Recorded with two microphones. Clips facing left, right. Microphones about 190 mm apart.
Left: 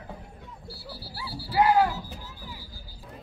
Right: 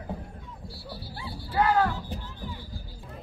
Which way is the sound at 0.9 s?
25° right (ahead or behind).